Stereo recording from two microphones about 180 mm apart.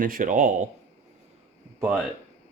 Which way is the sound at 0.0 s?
50° right (ahead or behind).